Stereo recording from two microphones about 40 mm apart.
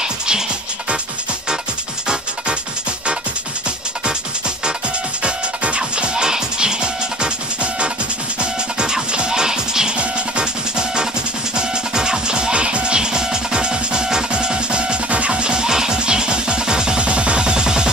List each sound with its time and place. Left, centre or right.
5.2 s music: right
8.4 s music: right